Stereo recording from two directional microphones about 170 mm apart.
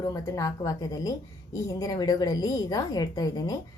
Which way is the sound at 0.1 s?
15° left (ahead or behind).